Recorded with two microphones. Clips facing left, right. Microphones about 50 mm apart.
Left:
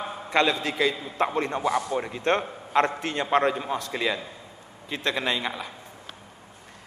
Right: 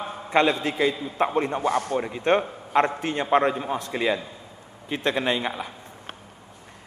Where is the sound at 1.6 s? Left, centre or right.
Right.